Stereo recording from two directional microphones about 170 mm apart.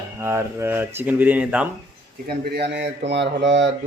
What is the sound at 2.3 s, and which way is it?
Speech, 70° right (ahead or behind).